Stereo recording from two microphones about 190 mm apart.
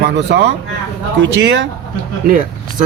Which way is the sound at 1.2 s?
70° right (ahead or behind).